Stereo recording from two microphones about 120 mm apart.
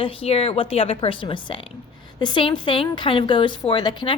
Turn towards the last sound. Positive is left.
turn(degrees=40)  # may be behind; listen again after turning